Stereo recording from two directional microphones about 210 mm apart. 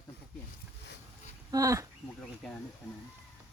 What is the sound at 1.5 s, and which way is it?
Speech, 15° right (ahead or behind).